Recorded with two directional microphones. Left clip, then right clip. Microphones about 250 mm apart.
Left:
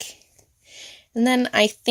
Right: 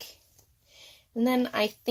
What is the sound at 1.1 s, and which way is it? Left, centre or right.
Speech, left.